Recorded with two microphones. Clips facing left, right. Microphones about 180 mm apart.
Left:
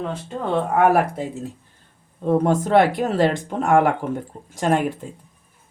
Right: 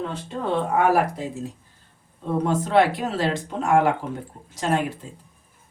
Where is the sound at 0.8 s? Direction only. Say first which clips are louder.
Left 4 dB; 55° left (ahead or behind).